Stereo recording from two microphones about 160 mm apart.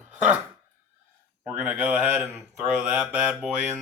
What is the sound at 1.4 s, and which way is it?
Speech, 10° right (ahead or behind).